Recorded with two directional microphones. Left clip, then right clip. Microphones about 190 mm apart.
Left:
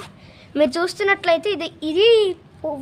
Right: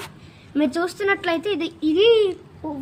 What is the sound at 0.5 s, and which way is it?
A woman's voice, 50° left (ahead or behind).